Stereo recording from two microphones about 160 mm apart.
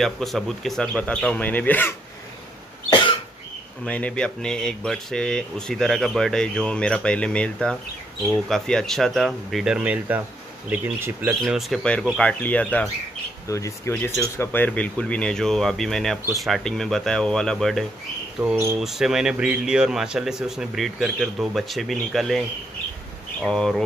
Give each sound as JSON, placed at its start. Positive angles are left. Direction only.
{"t": 0.0, "sound": "speech", "side_deg": 0}
{"t": 2.9, "sound": "cough", "side_deg": 30}
{"t": 3.8, "sound": "speech", "side_deg": 5}
{"t": 11.4, "sound": "speech", "side_deg": 0}
{"t": 18.4, "sound": "speech", "side_deg": -10}
{"t": 23.4, "sound": "speech", "side_deg": 0}